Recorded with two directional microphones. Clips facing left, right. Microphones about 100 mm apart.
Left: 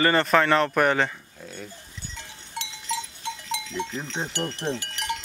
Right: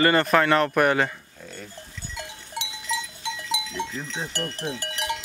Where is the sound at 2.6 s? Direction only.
10° right (ahead or behind).